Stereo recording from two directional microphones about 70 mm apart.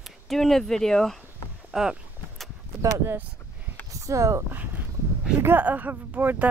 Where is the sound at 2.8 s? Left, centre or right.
Right.